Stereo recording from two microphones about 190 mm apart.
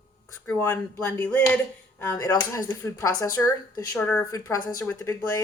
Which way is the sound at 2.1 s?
20° left (ahead or behind).